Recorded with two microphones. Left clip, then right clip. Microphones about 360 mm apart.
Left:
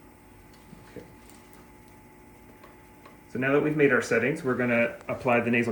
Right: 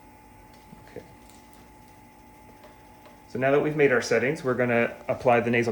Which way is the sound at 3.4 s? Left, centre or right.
Centre.